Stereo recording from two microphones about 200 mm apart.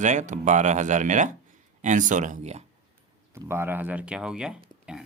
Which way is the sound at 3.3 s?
10° right (ahead or behind).